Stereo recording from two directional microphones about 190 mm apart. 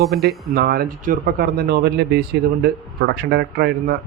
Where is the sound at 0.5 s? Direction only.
55° right (ahead or behind).